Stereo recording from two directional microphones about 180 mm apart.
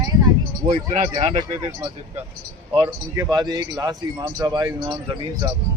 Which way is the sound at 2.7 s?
25° right (ahead or behind).